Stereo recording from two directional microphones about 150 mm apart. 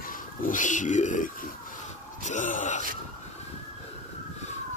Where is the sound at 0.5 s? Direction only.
55° left (ahead or behind).